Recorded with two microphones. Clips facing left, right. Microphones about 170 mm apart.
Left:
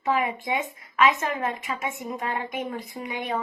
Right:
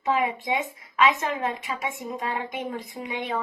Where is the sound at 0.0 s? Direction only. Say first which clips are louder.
Even; 20° right (ahead or behind).